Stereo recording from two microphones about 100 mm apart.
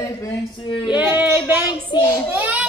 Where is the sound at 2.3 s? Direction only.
15° right (ahead or behind).